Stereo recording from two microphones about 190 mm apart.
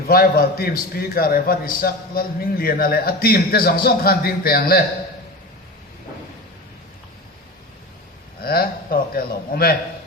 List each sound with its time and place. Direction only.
0.1 s a man's voice: 50° left (ahead or behind)
8.4 s speech: 50° left (ahead or behind)